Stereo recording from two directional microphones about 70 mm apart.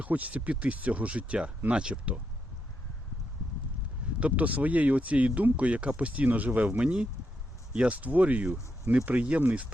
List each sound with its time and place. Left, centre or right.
0.0 s speech: right
4.2 s speech: right